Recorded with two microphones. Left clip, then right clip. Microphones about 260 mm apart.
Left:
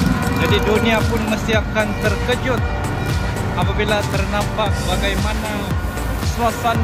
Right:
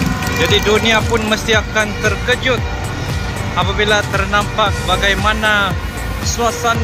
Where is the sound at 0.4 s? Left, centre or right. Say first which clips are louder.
Right 5 dB; centre.